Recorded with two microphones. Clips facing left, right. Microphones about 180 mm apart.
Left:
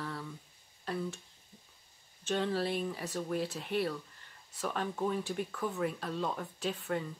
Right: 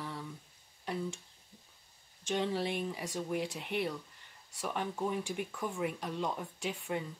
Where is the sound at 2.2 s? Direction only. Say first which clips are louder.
Left 1 dB; 15° right (ahead or behind).